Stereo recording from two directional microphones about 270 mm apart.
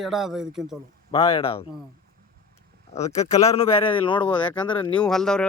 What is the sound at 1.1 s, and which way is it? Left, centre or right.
Speech, left.